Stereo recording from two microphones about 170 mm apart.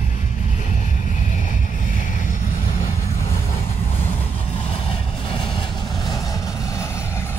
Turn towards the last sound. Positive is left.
turn(degrees=15)  # may be behind; listen again after turning